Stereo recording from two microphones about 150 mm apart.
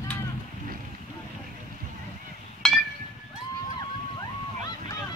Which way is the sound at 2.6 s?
Centre (ahead or behind).